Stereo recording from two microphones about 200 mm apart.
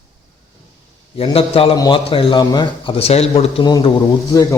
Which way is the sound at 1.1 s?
30° left (ahead or behind).